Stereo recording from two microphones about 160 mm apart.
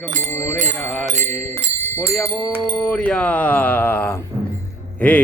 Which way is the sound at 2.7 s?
5° left (ahead or behind).